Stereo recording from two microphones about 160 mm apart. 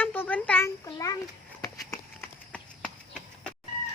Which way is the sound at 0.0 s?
10° left (ahead or behind).